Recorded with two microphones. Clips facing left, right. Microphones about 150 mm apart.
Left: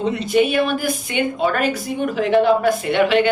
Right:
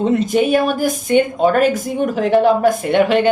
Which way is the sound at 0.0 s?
45° right (ahead or behind).